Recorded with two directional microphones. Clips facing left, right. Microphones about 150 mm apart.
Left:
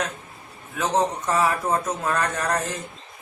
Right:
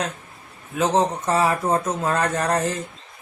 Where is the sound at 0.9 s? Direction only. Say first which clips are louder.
Even; 25° right (ahead or behind).